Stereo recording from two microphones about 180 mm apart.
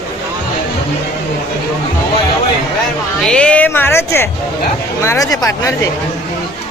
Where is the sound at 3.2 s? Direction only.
5° left (ahead or behind).